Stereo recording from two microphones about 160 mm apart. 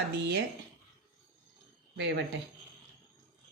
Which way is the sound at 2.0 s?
90° right.